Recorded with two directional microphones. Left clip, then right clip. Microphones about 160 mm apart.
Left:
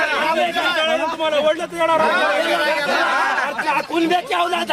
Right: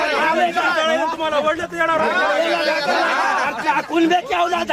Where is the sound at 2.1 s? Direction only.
30° right (ahead or behind).